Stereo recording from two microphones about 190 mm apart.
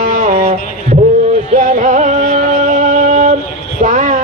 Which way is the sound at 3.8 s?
40° right (ahead or behind).